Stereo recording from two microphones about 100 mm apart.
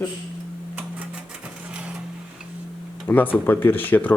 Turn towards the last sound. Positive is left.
turn(degrees=15)  # may be behind; listen again after turning